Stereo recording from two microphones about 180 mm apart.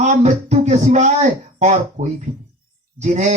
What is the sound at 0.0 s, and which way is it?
Speech, 40° right (ahead or behind).